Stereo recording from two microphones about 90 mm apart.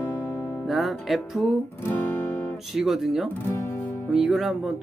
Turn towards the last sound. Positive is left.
turn(degrees=0)  # may be behind; listen again after turning